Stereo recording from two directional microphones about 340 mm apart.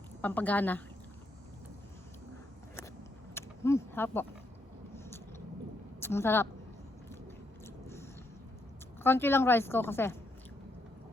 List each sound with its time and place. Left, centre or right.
0.2 s a woman's voice: centre
3.3 s vehicle: centre
6.0 s a woman's voice: centre
9.0 s a woman's voice: centre